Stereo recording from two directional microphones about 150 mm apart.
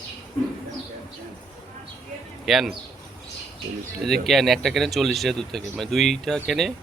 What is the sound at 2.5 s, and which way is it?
Speech, centre (ahead or behind).